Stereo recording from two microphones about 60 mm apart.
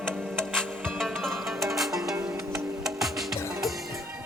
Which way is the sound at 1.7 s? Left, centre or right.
Centre.